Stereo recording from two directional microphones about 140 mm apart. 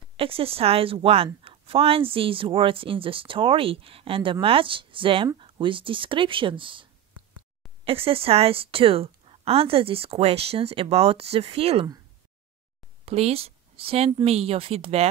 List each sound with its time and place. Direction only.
0.2 s a woman's voice: 40° right (ahead or behind)
13.0 s a woman's voice: 45° right (ahead or behind)